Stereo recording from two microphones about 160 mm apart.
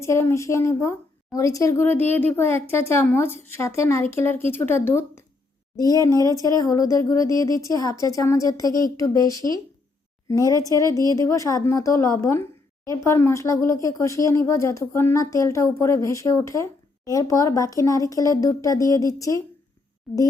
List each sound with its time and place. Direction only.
0.0 s a woman's voice: 15° left (ahead or behind)